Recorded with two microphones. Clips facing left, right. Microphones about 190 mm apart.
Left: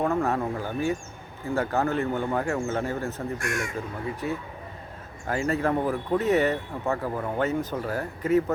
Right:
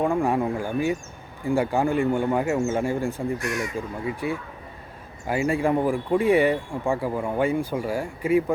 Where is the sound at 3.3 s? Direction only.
50° left (ahead or behind).